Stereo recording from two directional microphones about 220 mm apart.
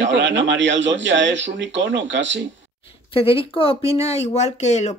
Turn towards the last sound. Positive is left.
turn(degrees=30)  # may be behind; listen again after turning